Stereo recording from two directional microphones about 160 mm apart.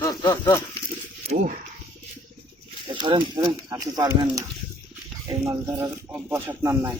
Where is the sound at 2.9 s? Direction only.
30° right (ahead or behind).